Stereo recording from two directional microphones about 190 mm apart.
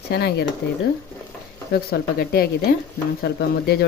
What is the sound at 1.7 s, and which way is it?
A woman's voice, 55° left (ahead or behind).